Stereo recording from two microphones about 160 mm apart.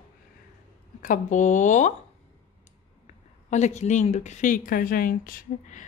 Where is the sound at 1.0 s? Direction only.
55° left (ahead or behind).